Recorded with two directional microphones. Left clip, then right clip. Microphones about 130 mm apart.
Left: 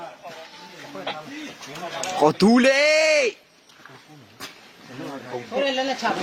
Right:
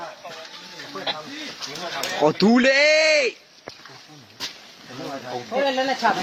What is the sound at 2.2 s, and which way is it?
Speech, 30° left (ahead or behind).